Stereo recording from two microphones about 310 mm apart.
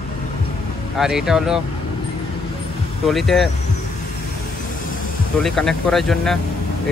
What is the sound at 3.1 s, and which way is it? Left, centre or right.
Speech, centre.